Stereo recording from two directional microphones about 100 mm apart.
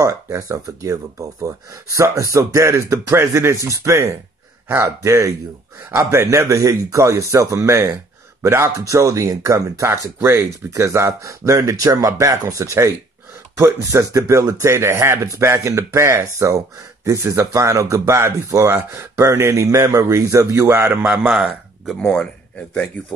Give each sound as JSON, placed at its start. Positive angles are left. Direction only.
{"t": 0.0, "sound": "speech", "side_deg": -30}
{"t": 21.0, "sound": "speech", "side_deg": -10}